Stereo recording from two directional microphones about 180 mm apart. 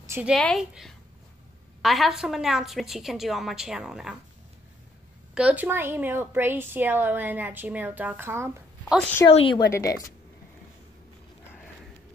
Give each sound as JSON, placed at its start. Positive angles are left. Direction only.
{"t": 0.0, "sound": "a sound", "side_deg": -15}
{"t": 0.3, "sound": "a woman's voice", "side_deg": 0}
{"t": 5.3, "sound": "a woman's voice", "side_deg": -5}
{"t": 9.3, "sound": "a woman's voice", "side_deg": 30}
{"t": 9.7, "sound": "speech", "side_deg": 15}